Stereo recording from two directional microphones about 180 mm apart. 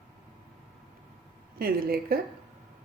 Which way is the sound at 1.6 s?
55° right (ahead or behind).